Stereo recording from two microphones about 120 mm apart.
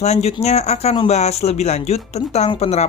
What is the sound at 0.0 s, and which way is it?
Speech, 65° left (ahead or behind).